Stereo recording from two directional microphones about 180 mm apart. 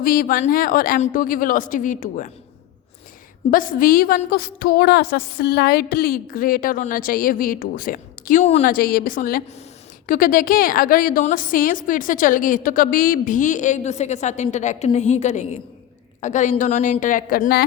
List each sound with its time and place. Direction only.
0.0 s a woman's voice: 50° left (ahead or behind)
3.5 s a woman's voice: 50° left (ahead or behind)
8.6 s a woman's voice: 55° left (ahead or behind)